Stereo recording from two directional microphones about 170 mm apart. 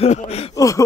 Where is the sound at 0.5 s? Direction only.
20° left (ahead or behind).